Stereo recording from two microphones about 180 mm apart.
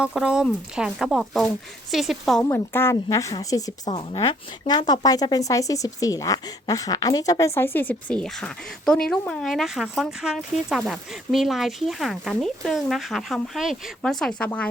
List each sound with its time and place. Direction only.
0.0 s speech: 5° right (ahead or behind)
2.4 s a woman's voice: 15° left (ahead or behind)
3.9 s a woman's voice: 30° left (ahead or behind); by 14.7 s 5° left (ahead or behind)